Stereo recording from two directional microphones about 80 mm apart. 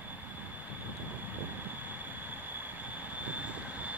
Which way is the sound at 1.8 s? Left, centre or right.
Right.